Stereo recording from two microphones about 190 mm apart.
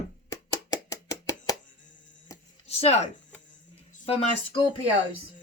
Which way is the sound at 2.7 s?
35° left (ahead or behind).